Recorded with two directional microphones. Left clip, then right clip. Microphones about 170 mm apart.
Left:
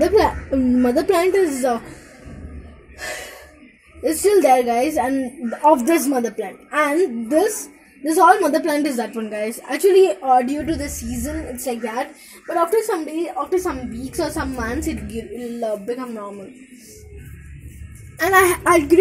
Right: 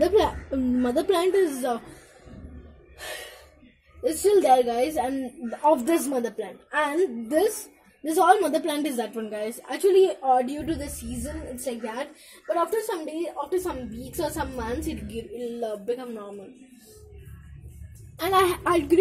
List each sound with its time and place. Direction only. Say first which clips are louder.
0.3 s a woman's voice: left 8 dB; 10° left (ahead or behind)
3.0 s gasp: left 7 dB; centre (ahead or behind)
4.0 s a woman's voice: left 5 dB; 15° left (ahead or behind)
11.2 s a woman's voice: left 7 dB; 20° left (ahead or behind)
18.1 s a woman's voice: left 7 dB; centre (ahead or behind)